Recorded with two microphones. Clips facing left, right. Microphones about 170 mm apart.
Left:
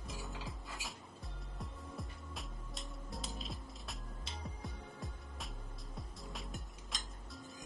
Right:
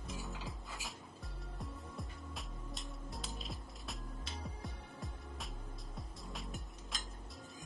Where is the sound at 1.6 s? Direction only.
Centre (ahead or behind).